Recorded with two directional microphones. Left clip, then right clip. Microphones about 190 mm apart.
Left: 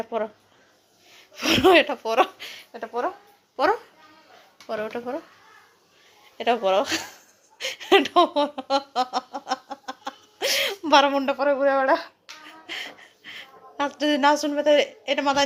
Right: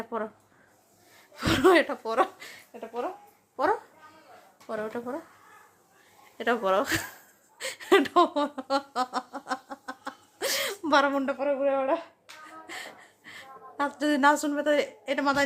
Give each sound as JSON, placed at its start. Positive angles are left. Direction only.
{"t": 0.0, "sound": "speech", "side_deg": -5}
{"t": 1.4, "sound": "speech", "side_deg": 0}
{"t": 2.7, "sound": "speech", "side_deg": 20}
{"t": 3.5, "sound": "a child's voice", "side_deg": 10}
{"t": 6.3, "sound": "speech", "side_deg": -10}
{"t": 7.6, "sound": "a sound", "side_deg": -5}
{"t": 11.4, "sound": "speech", "side_deg": 20}
{"t": 12.5, "sound": "a sound", "side_deg": 0}
{"t": 14.4, "sound": "speech", "side_deg": -5}